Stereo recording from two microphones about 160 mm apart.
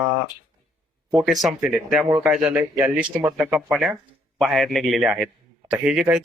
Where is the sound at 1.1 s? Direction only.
5° right (ahead or behind).